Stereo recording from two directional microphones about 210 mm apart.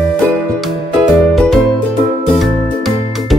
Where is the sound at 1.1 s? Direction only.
Centre (ahead or behind).